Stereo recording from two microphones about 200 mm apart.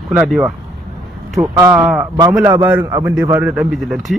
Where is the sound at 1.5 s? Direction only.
10° right (ahead or behind).